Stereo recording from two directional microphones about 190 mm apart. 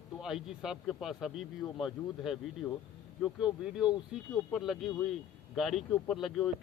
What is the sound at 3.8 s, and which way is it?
Speech, 20° left (ahead or behind).